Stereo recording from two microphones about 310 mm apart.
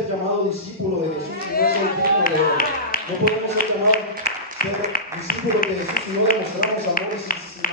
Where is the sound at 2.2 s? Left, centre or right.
Left.